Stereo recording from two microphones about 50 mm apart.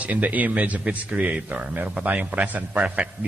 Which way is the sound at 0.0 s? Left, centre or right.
Right.